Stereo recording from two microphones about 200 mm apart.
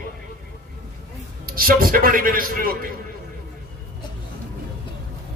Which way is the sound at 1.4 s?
45° right (ahead or behind).